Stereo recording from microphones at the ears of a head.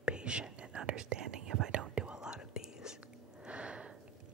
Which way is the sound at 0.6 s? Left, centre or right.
Right.